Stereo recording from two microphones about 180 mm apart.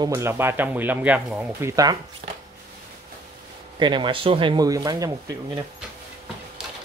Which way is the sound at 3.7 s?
25° right (ahead or behind).